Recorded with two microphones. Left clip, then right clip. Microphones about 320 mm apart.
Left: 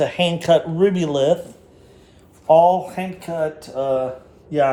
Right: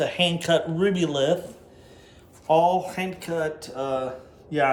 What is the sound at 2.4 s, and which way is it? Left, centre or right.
A man's voice, centre.